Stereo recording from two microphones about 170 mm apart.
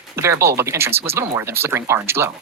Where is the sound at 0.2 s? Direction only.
15° right (ahead or behind).